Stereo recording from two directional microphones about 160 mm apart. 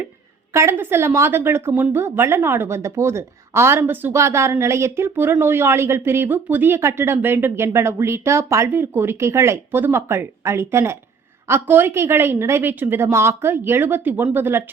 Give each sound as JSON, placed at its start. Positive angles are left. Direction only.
{"t": 0.5, "sound": "speech", "side_deg": -15}